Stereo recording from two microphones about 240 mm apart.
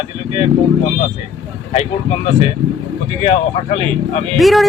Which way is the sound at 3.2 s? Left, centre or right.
Left.